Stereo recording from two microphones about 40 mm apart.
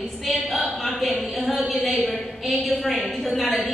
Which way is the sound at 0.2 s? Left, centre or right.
Centre.